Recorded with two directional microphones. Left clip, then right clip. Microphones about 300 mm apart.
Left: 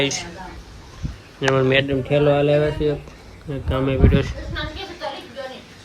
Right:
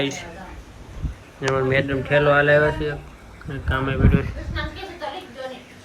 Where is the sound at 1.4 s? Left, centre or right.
Centre.